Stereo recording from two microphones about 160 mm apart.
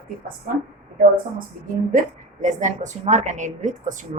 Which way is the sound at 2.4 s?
50° right (ahead or behind).